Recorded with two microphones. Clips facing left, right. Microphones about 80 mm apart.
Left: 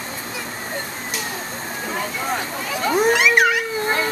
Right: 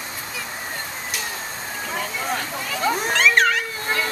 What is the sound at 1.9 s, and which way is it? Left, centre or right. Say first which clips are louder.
Speech: left 2 dB; centre.